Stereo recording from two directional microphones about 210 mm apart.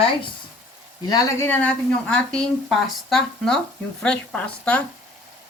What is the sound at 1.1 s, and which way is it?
Speech, 10° left (ahead or behind).